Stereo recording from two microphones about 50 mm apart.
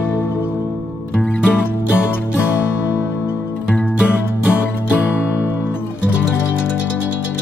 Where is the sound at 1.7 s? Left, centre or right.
Left.